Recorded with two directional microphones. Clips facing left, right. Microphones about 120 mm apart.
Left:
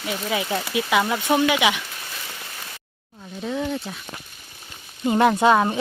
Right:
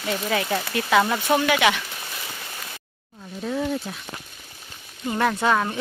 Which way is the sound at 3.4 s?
Centre (ahead or behind).